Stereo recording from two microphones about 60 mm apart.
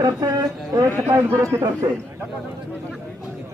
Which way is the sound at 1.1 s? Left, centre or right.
Right.